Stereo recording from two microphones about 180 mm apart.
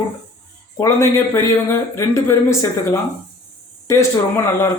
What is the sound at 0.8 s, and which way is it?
Speech, 15° left (ahead or behind).